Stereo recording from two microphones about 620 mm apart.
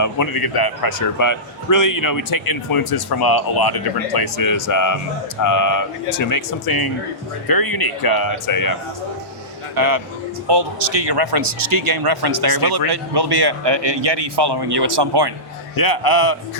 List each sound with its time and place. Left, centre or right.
0.0 s speech: left
9.7 s speech: right
15.7 s speech: left